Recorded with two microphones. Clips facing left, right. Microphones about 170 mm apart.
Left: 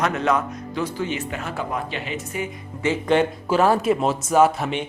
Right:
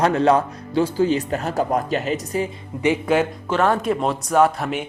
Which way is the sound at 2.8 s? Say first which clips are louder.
Right 3 dB; 15° right (ahead or behind).